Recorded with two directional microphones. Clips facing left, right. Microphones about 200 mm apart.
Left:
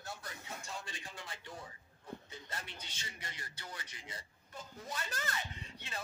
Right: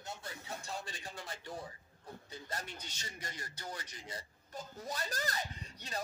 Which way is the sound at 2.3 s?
40° right (ahead or behind).